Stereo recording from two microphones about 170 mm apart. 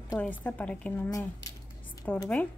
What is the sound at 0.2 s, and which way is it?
A woman's voice, 10° left (ahead or behind).